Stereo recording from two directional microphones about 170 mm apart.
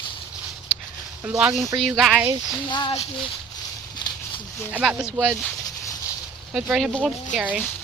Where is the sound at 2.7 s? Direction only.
30° left (ahead or behind).